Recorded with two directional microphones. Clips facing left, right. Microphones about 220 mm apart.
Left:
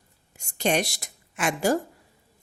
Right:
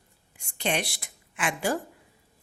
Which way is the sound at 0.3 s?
40° left (ahead or behind).